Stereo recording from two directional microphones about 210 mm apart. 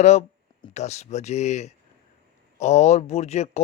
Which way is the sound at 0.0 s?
30° left (ahead or behind).